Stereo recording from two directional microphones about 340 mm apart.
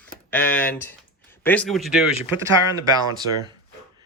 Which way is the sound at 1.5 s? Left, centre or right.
Centre.